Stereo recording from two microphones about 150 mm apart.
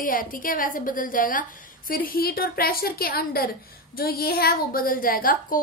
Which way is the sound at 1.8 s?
75° left (ahead or behind).